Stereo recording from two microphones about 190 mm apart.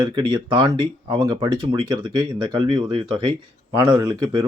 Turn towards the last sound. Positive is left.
turn(degrees=-25)  # may be behind; listen again after turning